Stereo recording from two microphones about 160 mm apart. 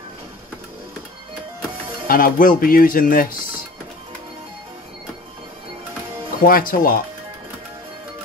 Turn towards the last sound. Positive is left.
turn(degrees=60)  # may be behind; listen again after turning